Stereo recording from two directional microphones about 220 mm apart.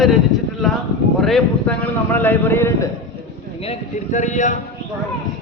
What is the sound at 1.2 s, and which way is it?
A man's voice, 5° left (ahead or behind).